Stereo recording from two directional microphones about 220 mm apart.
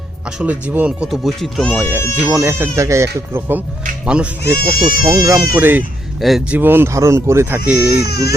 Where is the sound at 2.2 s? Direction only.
10° right (ahead or behind).